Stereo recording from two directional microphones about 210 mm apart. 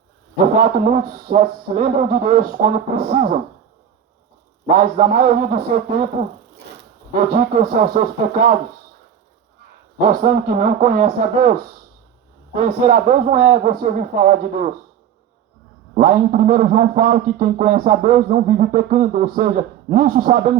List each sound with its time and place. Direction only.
0.5 s a man's voice: 40° right (ahead or behind)
4.6 s a man's voice: 40° right (ahead or behind)
7.1 s speech: 40° right (ahead or behind)
10.0 s a man's voice: 45° right (ahead or behind)
12.5 s a man's voice: 35° right (ahead or behind)
16.0 s a man's voice: 40° right (ahead or behind)